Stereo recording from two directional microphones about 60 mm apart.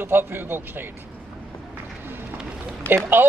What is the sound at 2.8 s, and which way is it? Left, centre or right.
Speech, left.